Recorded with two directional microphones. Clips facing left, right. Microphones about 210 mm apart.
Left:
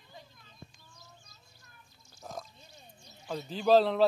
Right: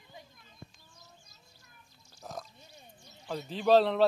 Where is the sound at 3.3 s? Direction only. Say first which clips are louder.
Even; centre (ahead or behind).